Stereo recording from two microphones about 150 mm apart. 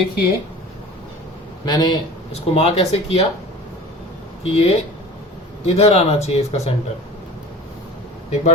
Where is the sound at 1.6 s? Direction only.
30° left (ahead or behind).